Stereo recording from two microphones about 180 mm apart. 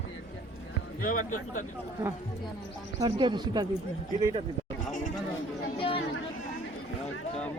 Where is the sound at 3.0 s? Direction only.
25° right (ahead or behind).